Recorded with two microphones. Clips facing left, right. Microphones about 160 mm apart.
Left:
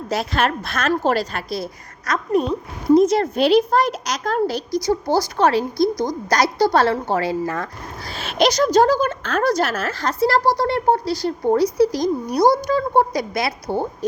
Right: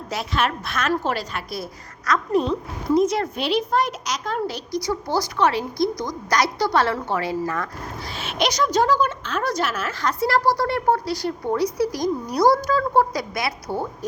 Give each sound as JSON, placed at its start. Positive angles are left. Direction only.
{"t": 0.1, "sound": "a woman's voice", "side_deg": 35}
{"t": 2.0, "sound": "speech", "side_deg": 20}
{"t": 2.9, "sound": "a woman's voice", "side_deg": 30}
{"t": 5.9, "sound": "a woman's voice", "side_deg": 0}
{"t": 6.3, "sound": "a woman's voice", "side_deg": 30}